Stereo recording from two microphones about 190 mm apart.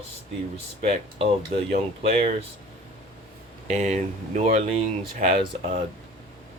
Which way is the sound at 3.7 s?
35° right (ahead or behind).